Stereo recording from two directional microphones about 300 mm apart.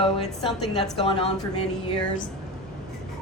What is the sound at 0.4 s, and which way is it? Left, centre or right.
Speech, centre.